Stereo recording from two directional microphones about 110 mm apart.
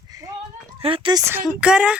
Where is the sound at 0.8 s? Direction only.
55° right (ahead or behind).